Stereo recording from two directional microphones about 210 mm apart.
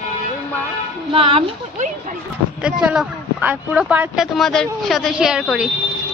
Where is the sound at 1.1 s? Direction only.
25° right (ahead or behind).